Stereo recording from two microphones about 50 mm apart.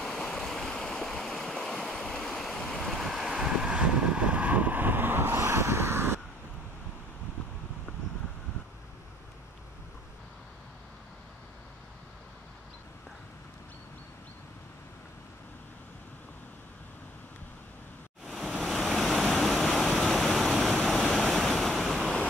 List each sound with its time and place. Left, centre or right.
0.0 s stream: centre
2.2 s waves: centre
2.9 s waves: centre
3.4 s vehicle: centre; by 5.4 s right
5.4 s vehicle: right
18.2 s pink noise: centre
21.9 s waves: centre